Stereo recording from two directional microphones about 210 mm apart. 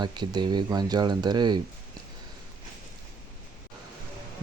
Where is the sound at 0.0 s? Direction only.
20° right (ahead or behind).